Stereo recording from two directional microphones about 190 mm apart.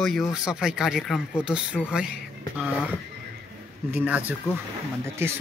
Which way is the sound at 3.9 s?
10° right (ahead or behind).